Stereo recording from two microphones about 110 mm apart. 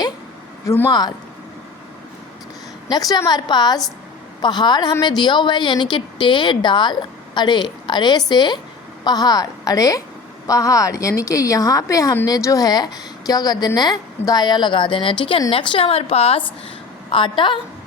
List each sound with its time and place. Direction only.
0.9 s a woman's voice: 40° left (ahead or behind)
2.9 s a woman's voice: 35° left (ahead or behind); by 16.5 s 65° left (ahead or behind)
17.1 s a woman's voice: 50° left (ahead or behind)